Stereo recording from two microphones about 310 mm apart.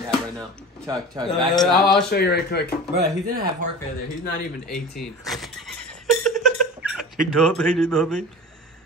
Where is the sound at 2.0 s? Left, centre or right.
Left.